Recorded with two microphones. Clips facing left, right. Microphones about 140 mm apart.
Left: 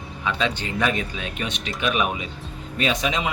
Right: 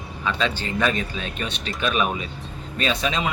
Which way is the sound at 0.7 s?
10° left (ahead or behind).